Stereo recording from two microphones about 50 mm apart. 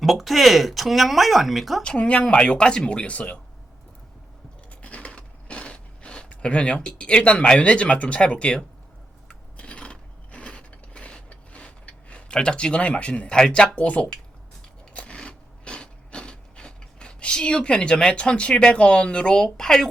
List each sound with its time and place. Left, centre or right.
0.0 s speech: centre
1.8 s speech: left
4.7 s a sound: left
7.6 s speech: left
9.6 s mechanisms: left
13.7 s speech: left
14.9 s a sound: left